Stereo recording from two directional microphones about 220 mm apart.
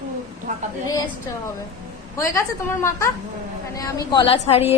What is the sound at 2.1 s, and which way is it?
A woman's voice, 15° left (ahead or behind).